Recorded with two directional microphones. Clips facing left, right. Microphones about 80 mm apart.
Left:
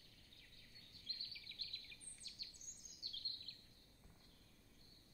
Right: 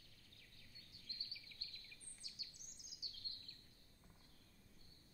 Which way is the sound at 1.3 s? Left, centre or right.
Centre.